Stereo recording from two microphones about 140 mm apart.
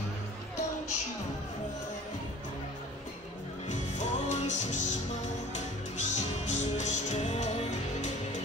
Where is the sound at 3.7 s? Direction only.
60° left (ahead or behind).